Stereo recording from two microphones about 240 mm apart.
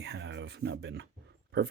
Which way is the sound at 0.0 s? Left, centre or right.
Right.